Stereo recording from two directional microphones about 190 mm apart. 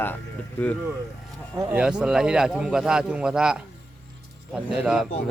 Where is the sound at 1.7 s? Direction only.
5° right (ahead or behind).